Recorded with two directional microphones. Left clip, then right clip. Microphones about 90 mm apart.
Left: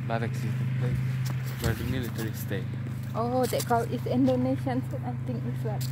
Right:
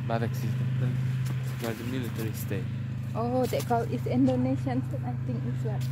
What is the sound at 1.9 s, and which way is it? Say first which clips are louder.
Speech: left 1 dB; 30° right (ahead or behind).